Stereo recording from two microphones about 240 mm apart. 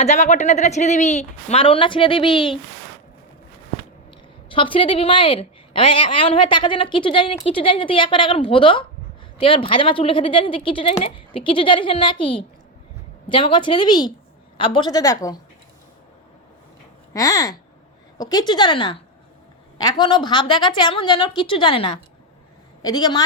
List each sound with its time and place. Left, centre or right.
0.0 s a woman's voice: left
4.5 s a woman's voice: left
17.2 s a woman's voice: centre